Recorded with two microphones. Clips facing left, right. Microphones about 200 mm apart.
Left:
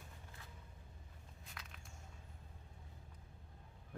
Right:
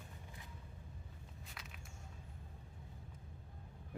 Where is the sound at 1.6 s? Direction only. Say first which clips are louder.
Even; 5° right (ahead or behind).